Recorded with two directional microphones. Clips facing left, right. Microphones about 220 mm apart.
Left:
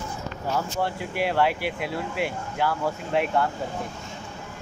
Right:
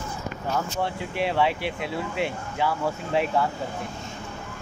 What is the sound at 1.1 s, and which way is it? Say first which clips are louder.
Speech: even; 5° left (ahead or behind).